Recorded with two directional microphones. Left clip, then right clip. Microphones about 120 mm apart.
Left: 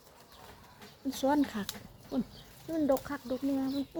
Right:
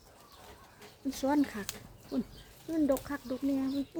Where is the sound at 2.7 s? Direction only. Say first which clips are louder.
Left 1 dB; 20° right (ahead or behind).